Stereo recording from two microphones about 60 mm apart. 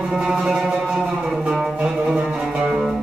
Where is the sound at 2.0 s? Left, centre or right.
Centre.